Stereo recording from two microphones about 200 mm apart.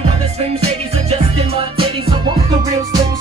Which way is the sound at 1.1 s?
30° right (ahead or behind).